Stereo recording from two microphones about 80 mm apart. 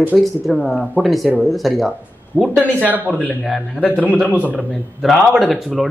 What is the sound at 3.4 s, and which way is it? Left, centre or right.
Speech, centre.